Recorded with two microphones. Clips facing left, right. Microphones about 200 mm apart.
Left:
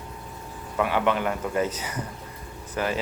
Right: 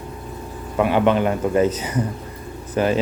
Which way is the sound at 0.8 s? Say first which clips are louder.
Right 7 dB; 25° right (ahead or behind).